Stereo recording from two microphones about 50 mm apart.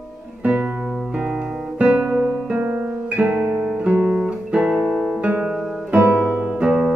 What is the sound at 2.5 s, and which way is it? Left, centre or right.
Guitar, right.